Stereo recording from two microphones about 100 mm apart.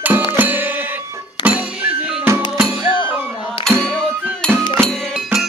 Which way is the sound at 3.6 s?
5° left (ahead or behind).